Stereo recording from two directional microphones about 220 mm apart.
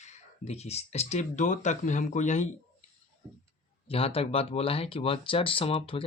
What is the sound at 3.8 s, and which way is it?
Speech, 25° left (ahead or behind).